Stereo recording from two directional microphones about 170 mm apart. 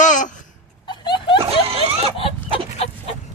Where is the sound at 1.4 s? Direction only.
35° right (ahead or behind).